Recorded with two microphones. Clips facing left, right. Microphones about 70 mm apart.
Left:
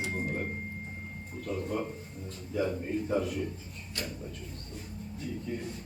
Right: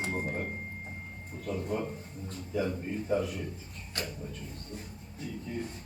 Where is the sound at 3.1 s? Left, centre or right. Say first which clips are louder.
Right 1 dB; centre.